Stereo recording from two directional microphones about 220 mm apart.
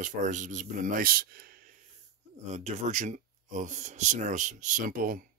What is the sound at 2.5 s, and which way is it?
Speech, 30° right (ahead or behind).